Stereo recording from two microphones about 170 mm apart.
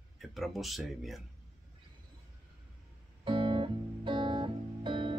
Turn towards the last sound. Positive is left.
turn(degrees=-30)  # may be behind; listen again after turning